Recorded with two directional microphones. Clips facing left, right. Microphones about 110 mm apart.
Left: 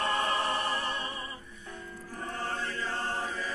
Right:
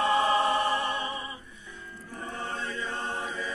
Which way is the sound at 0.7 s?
20° right (ahead or behind).